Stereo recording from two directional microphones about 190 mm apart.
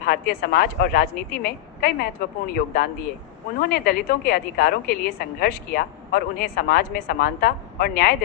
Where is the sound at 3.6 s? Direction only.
50° left (ahead or behind).